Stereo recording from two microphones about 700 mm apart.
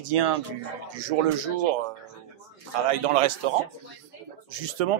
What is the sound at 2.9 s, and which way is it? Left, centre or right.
Speech, right.